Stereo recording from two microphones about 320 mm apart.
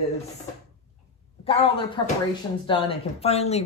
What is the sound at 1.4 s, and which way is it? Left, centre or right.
Speech, centre.